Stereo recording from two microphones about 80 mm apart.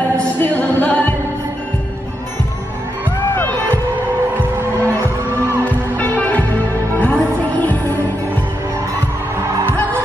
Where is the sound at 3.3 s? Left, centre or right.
Left.